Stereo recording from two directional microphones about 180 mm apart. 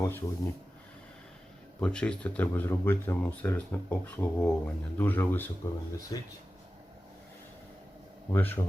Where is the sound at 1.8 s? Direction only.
5° left (ahead or behind).